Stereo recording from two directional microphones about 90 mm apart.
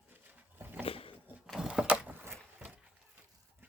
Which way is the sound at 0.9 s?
90° left.